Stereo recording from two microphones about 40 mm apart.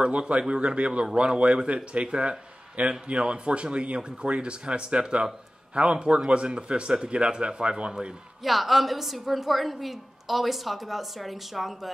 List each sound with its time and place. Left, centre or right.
0.0 s speech: right
8.5 s a woman's voice: centre